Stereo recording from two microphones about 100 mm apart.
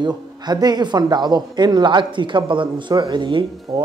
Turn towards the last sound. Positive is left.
turn(degrees=-50)  # may be behind; listen again after turning